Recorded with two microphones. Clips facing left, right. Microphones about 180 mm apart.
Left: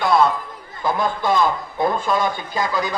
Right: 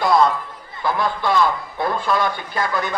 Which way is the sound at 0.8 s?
20° left (ahead or behind).